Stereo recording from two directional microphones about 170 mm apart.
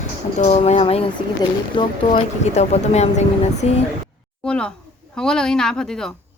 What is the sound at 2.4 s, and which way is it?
Speech, 40° left (ahead or behind).